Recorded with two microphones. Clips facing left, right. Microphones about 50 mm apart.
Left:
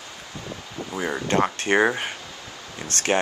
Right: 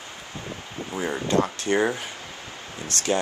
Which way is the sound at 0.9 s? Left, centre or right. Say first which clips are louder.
Even; left.